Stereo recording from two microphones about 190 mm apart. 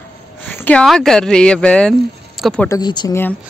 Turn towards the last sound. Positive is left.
turn(degrees=20)  # may be behind; listen again after turning